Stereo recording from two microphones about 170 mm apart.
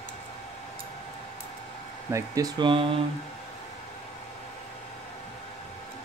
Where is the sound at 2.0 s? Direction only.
20° right (ahead or behind).